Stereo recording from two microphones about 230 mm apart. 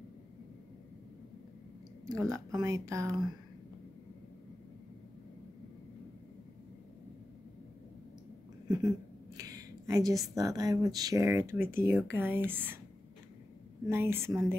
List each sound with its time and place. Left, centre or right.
2.0 s speech: centre
8.6 s a sound: centre
9.4 s speech: centre
13.8 s speech: centre